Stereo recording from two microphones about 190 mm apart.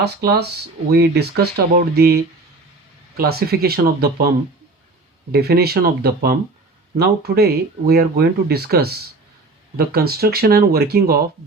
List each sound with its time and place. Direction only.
0.0 s speech: 60° right (ahead or behind)
5.3 s speech: 55° right (ahead or behind)